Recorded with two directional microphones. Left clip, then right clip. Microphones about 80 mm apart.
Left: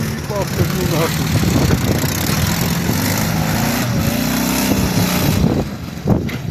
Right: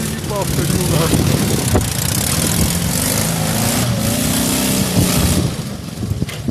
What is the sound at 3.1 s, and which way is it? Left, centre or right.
Vehicle, right.